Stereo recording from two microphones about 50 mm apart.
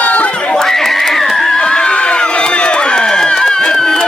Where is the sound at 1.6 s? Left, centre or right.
Centre.